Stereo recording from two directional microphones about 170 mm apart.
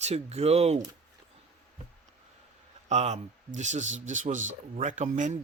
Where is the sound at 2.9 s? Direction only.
40° right (ahead or behind).